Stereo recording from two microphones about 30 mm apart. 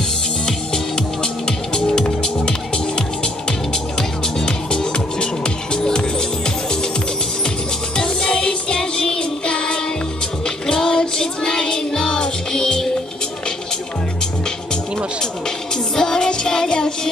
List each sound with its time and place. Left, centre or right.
1.8 s music: left
5.8 s music: left
8.0 s music: left
16.0 s music: centre